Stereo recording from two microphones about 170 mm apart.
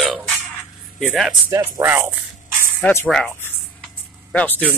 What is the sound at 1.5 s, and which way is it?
Speech, 15° right (ahead or behind).